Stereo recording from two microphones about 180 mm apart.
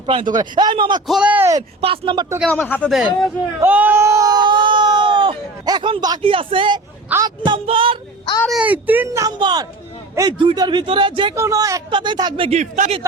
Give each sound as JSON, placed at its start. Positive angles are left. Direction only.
{"t": 0.0, "sound": "speech", "side_deg": -30}
{"t": 1.0, "sound": "speech", "side_deg": -5}
{"t": 1.8, "sound": "speech", "side_deg": -30}
{"t": 2.4, "sound": "speech", "side_deg": 5}
{"t": 3.6, "sound": "a sound", "side_deg": -10}
{"t": 7.1, "sound": "speech", "side_deg": -20}
{"t": 8.4, "sound": "speech", "side_deg": -5}
{"t": 12.5, "sound": "speech", "side_deg": -40}